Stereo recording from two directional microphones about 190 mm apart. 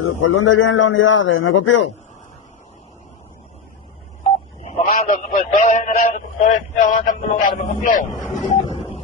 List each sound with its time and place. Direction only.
0.0 s a man's voice: 90° left
4.2 s telephone dialing: 35° left (ahead or behind)
8.2 s vehicle: centre (ahead or behind)
8.6 s a sound: 25° left (ahead or behind)